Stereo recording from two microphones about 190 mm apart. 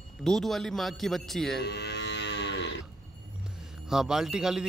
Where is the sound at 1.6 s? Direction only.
60° left (ahead or behind).